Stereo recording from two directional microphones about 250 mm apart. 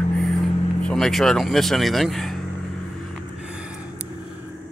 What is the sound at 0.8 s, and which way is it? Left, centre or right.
Speech, centre.